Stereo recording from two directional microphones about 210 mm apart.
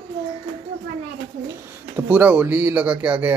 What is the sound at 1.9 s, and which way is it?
Speech, 10° right (ahead or behind).